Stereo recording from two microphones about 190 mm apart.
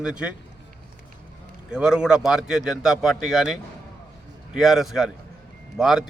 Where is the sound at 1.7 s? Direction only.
5° right (ahead or behind).